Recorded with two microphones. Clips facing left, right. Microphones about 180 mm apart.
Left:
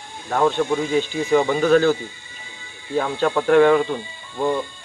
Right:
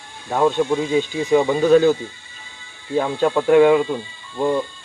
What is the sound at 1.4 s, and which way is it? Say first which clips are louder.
Speech: right 1 dB; centre (ahead or behind).